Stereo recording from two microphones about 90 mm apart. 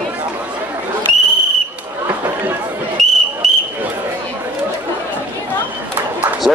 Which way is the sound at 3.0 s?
Centre (ahead or behind).